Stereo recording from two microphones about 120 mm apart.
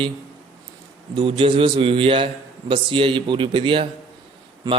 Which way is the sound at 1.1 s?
45° right (ahead or behind).